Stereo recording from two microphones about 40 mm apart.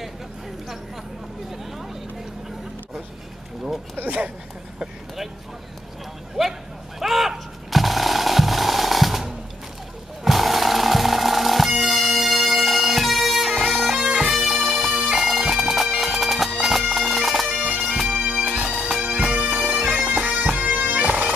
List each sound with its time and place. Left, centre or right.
6.4 s speech: centre
7.0 s machine gun: centre
10.2 s music: centre
13.6 s bagpipes: centre
17.5 s bagpipes: right